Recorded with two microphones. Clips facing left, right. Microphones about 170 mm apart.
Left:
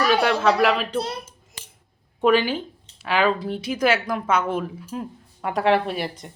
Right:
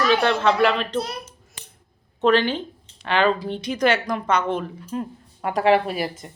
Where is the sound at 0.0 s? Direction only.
10° left (ahead or behind).